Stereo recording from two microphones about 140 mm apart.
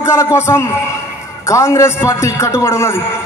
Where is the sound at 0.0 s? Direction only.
20° left (ahead or behind).